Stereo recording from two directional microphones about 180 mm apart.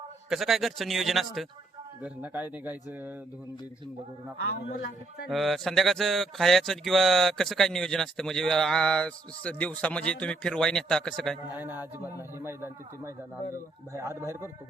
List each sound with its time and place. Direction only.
0.3 s speech: centre (ahead or behind)
4.8 s speech: 65° left (ahead or behind)
5.3 s speech: centre (ahead or behind)
11.5 s speech: 10° right (ahead or behind)